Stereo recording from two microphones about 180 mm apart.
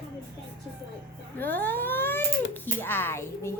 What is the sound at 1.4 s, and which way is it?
Speech, 10° left (ahead or behind).